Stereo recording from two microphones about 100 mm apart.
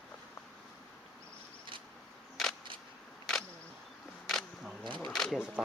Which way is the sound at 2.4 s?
Centre (ahead or behind).